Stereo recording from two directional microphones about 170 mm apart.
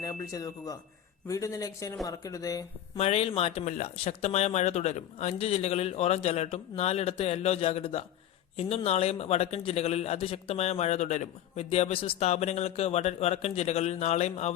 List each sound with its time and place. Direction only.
0.0 s speech: 20° left (ahead or behind)
3.0 s a man's voice: 35° left (ahead or behind)